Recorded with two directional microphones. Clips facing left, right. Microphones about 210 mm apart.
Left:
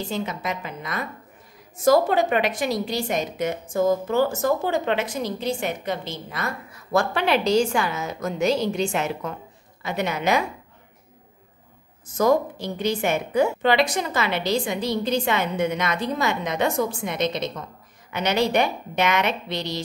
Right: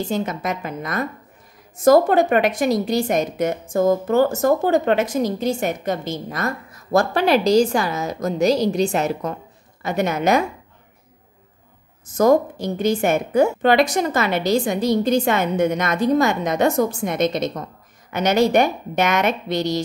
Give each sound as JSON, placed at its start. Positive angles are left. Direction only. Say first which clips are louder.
{"t": 0.1, "sound": "a woman's voice", "louder": "right 4 dB", "side_deg": -45}
{"t": 12.2, "sound": "a woman's voice", "louder": "right 4 dB", "side_deg": -45}